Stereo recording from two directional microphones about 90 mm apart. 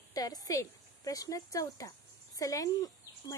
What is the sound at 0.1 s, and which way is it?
Speech, 45° left (ahead or behind).